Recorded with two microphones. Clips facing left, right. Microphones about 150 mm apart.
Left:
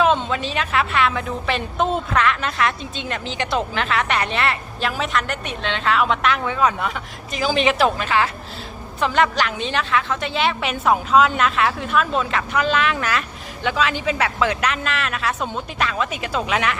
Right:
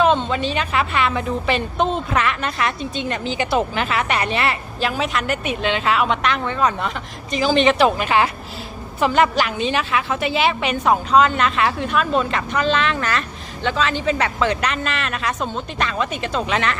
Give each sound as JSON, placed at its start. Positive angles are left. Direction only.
{"t": 0.0, "sound": "a woman's voice", "side_deg": 0}
{"t": 7.9, "sound": "a woman's voice", "side_deg": -15}
{"t": 9.0, "sound": "a woman's voice", "side_deg": -5}